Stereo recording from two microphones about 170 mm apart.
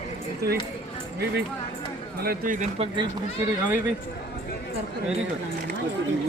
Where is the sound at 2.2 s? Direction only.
55° right (ahead or behind).